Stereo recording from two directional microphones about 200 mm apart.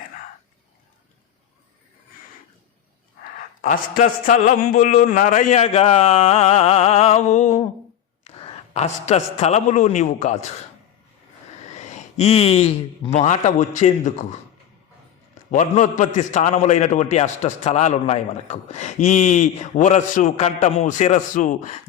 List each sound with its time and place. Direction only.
3.6 s a man's voice: 40° left (ahead or behind)
11.7 s a man's voice: 35° left (ahead or behind)
15.5 s a man's voice: 40° left (ahead or behind)